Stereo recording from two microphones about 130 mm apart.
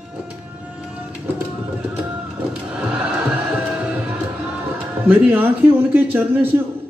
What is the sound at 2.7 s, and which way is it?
Music, 10° right (ahead or behind).